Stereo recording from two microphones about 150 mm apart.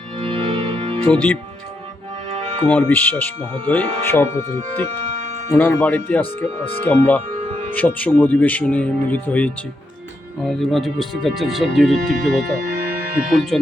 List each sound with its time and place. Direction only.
0.2 s music: 35° right (ahead or behind)
1.1 s speech: 10° left (ahead or behind)
2.6 s speech: 10° left (ahead or behind)
5.5 s speech: 15° left (ahead or behind)
7.3 s music: 45° right (ahead or behind)
7.7 s speech: 10° left (ahead or behind)